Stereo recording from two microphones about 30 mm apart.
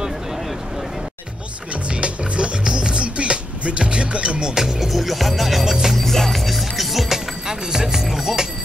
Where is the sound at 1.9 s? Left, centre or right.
Right.